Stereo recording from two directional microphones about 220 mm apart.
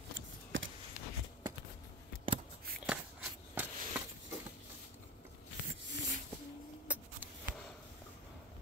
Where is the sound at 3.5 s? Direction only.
10° right (ahead or behind).